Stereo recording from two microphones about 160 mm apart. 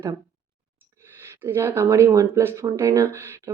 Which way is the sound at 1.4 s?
15° right (ahead or behind).